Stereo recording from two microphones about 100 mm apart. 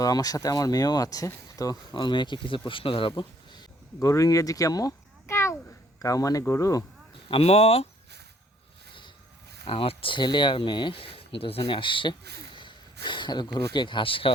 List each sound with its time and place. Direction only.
0.0 s speech: 40° left (ahead or behind)
4.0 s a child's voice: 35° left (ahead or behind)
7.3 s speech: 80° left
9.6 s speech: 70° left (ahead or behind)